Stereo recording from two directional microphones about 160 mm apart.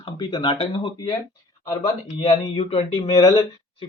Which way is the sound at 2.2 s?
40° left (ahead or behind).